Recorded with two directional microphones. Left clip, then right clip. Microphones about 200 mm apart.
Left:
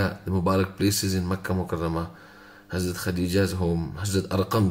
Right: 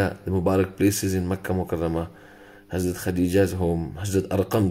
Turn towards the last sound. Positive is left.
turn(degrees=-10)  # may be behind; listen again after turning